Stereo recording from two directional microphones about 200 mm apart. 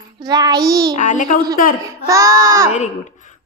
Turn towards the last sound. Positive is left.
turn(degrees=40)  # may be behind; listen again after turning